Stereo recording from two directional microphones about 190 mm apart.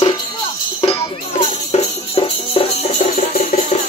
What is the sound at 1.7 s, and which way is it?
Music, 30° left (ahead or behind).